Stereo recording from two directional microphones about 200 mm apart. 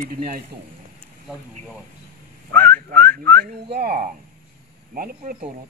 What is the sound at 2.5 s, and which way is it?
Whistling, 10° left (ahead or behind).